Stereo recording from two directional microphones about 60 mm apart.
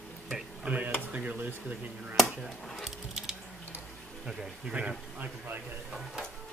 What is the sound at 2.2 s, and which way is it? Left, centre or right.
Speech, centre.